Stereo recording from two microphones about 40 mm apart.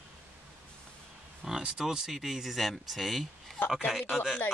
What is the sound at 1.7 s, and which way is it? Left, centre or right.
Speech, centre.